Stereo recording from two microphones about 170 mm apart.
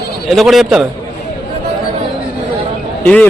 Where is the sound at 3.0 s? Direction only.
10° left (ahead or behind).